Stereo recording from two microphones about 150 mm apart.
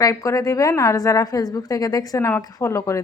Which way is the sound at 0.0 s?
20° left (ahead or behind).